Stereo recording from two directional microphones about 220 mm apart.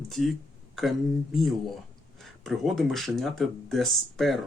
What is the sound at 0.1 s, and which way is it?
Speech, centre (ahead or behind).